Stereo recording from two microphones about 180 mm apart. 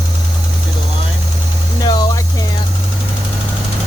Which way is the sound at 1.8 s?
25° left (ahead or behind).